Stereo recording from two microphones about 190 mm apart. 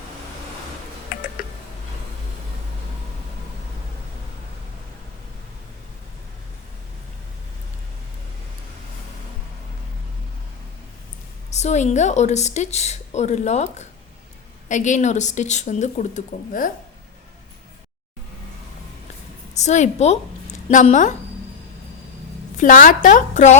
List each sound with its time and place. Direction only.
11.5 s a woman's voice: 35° left (ahead or behind)
19.5 s a woman's voice: 40° left (ahead or behind)
22.5 s a woman's voice: 45° left (ahead or behind)